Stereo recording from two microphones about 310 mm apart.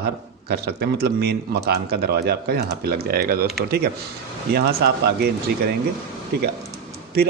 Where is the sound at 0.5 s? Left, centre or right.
Right.